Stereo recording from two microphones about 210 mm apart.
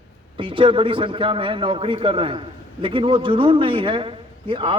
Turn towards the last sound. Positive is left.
turn(degrees=-25)  # may be behind; listen again after turning